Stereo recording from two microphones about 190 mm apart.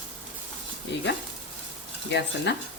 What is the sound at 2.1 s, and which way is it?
Speech, 70° left (ahead or behind).